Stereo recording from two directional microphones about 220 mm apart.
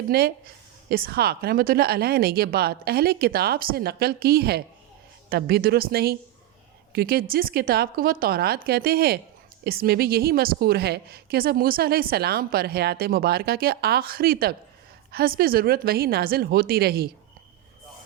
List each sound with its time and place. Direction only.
0.1 s a woman's voice: 45° right (ahead or behind)